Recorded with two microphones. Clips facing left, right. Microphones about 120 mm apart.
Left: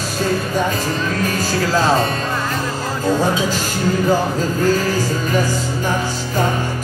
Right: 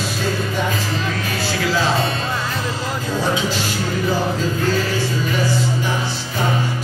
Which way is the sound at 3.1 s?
45° left (ahead or behind).